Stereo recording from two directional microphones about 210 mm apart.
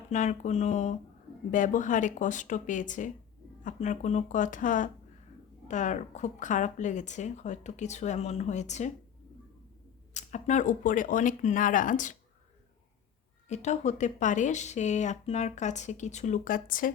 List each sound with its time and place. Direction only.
0.1 s speech: 35° left (ahead or behind)
10.2 s speech: 35° left (ahead or behind)
13.5 s speech: 35° left (ahead or behind)